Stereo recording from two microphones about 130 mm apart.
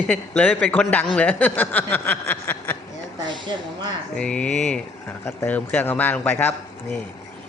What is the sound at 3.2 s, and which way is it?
Speech, 35° right (ahead or behind).